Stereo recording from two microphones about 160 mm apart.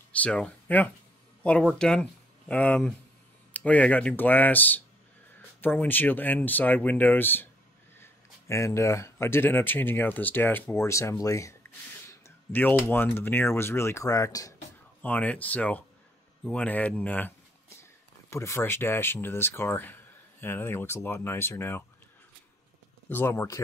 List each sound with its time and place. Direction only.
0.1 s speech: 10° left (ahead or behind)
15.0 s speech: 10° left (ahead or behind)
18.3 s speech: 15° left (ahead or behind)
23.0 s speech: 15° left (ahead or behind)